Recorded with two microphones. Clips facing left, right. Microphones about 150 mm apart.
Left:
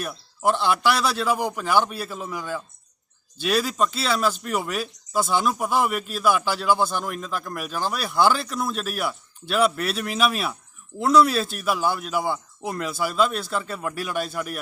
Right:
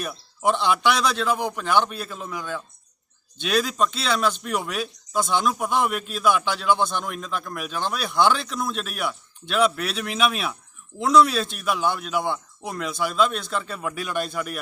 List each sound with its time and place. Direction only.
0.0 s speech: 5° left (ahead or behind)